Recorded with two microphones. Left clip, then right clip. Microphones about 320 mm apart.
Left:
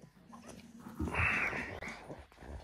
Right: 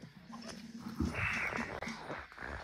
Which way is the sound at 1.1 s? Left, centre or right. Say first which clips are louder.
Left 4 dB; centre.